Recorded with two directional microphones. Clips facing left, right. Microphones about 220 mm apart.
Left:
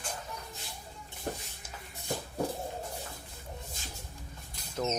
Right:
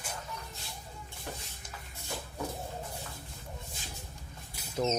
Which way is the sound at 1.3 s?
40° left (ahead or behind).